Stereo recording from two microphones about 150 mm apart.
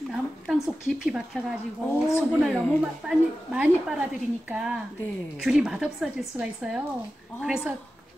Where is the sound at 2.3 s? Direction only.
5° right (ahead or behind).